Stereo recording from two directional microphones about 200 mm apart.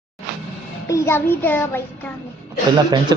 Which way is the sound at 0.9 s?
15° left (ahead or behind).